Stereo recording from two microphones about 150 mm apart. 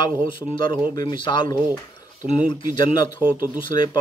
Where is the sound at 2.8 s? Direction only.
35° left (ahead or behind).